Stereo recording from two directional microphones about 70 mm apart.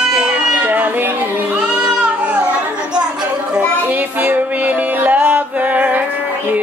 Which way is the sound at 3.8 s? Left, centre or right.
Right.